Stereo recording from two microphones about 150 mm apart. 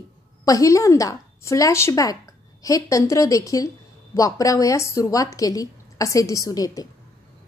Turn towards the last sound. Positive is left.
turn(degrees=25)  # may be behind; listen again after turning